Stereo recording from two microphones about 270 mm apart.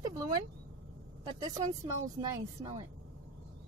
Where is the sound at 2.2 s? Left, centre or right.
Centre.